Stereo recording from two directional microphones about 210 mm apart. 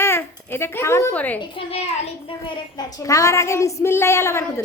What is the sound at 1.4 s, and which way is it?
Speech, 25° left (ahead or behind).